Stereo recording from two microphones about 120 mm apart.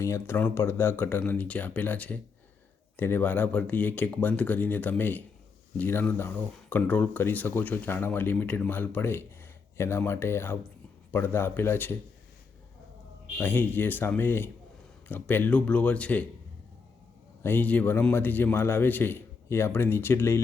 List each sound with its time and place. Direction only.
0.0 s speech: 20° left (ahead or behind)
13.4 s speech: 15° left (ahead or behind)
17.4 s speech: 15° left (ahead or behind)